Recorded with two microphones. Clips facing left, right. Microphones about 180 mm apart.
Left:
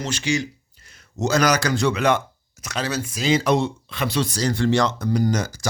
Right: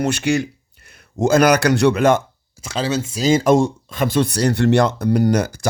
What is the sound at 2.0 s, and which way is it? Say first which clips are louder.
Speech: right 5 dB; 45° right (ahead or behind).